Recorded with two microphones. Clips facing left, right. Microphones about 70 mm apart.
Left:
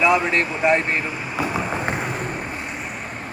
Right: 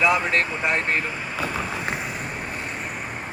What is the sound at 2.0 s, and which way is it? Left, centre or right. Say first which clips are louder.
Vehicle: left 4 dB; left.